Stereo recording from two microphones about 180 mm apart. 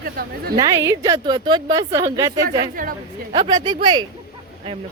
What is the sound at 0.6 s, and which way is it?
A woman's voice, 20° right (ahead or behind).